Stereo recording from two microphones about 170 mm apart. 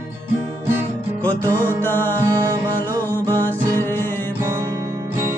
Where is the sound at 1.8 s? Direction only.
10° left (ahead or behind).